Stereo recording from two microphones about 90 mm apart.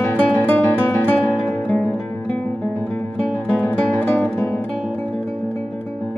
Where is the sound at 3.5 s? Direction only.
20° left (ahead or behind).